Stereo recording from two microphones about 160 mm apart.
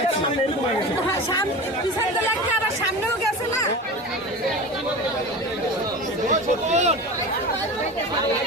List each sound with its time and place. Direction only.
6.7 s speech: 45° right (ahead or behind)